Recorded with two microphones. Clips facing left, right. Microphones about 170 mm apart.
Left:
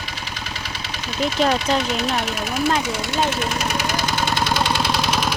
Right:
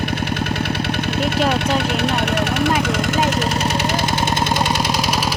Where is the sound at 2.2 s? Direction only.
65° right (ahead or behind).